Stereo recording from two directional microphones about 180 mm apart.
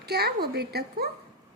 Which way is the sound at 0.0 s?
60° right (ahead or behind).